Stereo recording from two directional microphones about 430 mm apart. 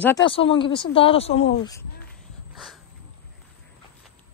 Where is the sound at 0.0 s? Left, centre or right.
Centre.